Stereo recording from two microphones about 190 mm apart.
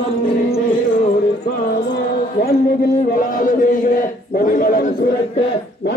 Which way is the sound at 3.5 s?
45° left (ahead or behind).